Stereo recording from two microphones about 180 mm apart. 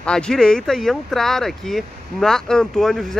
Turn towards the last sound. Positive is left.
turn(degrees=0)  # may be behind; listen again after turning